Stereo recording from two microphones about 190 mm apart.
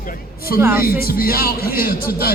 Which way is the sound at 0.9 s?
50° left (ahead or behind).